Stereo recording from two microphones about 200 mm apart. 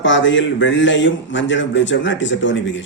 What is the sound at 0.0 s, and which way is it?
A man's voice, 70° left (ahead or behind).